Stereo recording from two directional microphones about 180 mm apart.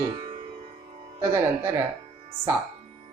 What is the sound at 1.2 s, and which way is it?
Speech, 15° right (ahead or behind).